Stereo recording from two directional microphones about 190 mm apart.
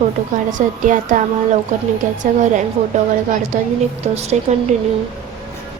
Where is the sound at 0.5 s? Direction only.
40° right (ahead or behind).